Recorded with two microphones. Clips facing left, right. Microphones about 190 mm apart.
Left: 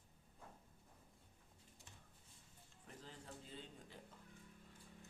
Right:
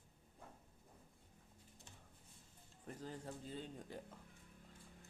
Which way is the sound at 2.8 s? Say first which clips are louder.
Right 8 dB; 45° right (ahead or behind).